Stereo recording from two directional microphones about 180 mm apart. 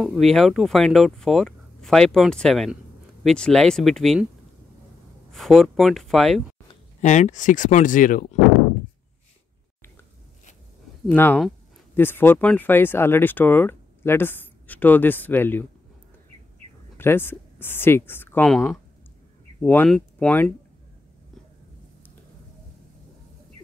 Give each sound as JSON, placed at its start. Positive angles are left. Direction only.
{"t": 0.0, "sound": "speech", "side_deg": 0}
{"t": 5.3, "sound": "speech", "side_deg": 0}
{"t": 7.0, "sound": "speech", "side_deg": 40}
{"t": 11.1, "sound": "speech", "side_deg": 10}
{"t": 16.9, "sound": "speech", "side_deg": 10}